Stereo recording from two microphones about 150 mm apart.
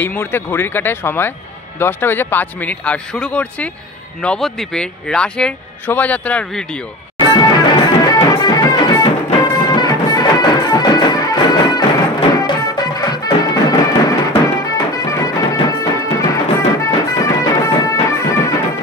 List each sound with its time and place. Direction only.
0.0 s a man's voice: 15° left (ahead or behind)
7.2 s music: 30° left (ahead or behind)